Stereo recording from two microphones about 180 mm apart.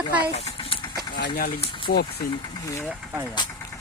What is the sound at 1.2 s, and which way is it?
Speech, 65° left (ahead or behind).